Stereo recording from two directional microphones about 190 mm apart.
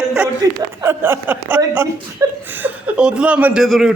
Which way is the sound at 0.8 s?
10° right (ahead or behind).